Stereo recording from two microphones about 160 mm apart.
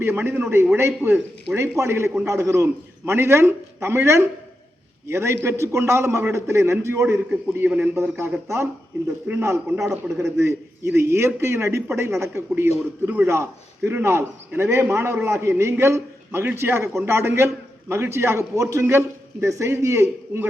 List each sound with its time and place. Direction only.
0.0 s a man's voice: 15° right (ahead or behind)
10.2 s a man's voice: 15° right (ahead or behind)